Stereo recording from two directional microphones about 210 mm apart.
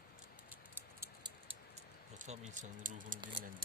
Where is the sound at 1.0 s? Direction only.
20° right (ahead or behind).